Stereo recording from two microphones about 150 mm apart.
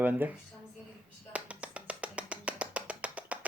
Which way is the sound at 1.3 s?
10° right (ahead or behind).